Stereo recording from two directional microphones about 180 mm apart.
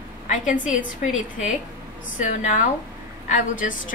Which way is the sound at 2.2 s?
45° left (ahead or behind).